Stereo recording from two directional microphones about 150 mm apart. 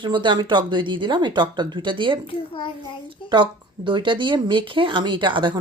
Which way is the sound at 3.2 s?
30° right (ahead or behind).